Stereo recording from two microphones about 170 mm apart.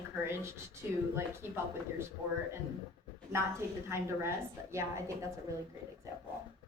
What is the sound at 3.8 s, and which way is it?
Speech, 15° right (ahead or behind).